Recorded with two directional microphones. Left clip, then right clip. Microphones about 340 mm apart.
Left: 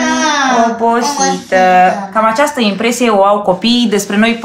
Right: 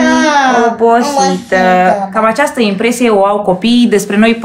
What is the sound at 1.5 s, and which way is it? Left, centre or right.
A woman's voice, centre.